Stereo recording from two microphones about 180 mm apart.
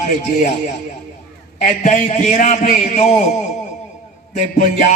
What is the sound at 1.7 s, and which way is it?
A man's voice, 40° left (ahead or behind).